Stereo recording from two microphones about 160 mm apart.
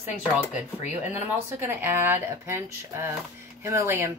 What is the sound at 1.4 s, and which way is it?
A woman's voice, 15° right (ahead or behind).